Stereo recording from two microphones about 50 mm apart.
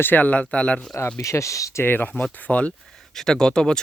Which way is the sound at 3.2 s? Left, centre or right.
Centre.